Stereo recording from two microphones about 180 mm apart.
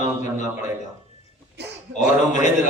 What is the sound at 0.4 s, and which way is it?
Speech, 15° right (ahead or behind).